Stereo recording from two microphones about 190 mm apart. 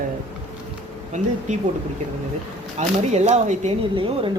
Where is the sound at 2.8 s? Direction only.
35° right (ahead or behind).